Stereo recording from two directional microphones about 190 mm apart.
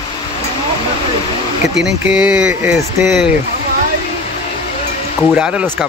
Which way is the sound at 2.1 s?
5° right (ahead or behind).